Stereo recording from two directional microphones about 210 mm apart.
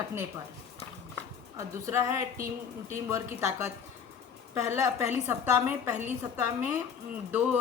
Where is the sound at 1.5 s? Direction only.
15° right (ahead or behind).